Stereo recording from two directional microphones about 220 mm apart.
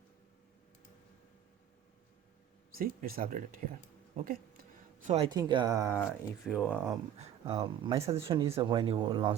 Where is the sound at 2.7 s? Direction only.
40° right (ahead or behind).